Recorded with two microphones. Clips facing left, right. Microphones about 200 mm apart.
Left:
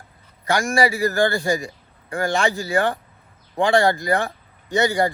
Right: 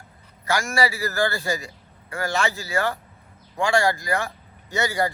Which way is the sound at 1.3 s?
15° left (ahead or behind).